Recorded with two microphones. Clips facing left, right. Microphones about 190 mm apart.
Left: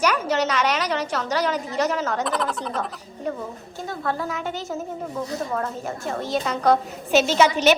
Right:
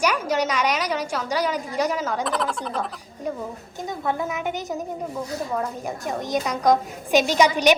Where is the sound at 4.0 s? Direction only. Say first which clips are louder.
Right 1 dB; 15° right (ahead or behind).